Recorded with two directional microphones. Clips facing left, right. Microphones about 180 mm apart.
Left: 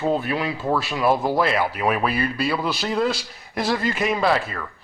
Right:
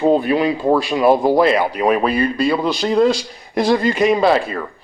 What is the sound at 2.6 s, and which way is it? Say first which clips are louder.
Speech: right 6 dB; 5° left (ahead or behind).